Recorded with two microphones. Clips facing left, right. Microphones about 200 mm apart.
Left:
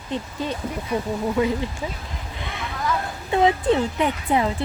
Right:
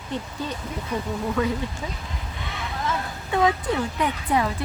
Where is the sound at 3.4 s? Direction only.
25° left (ahead or behind).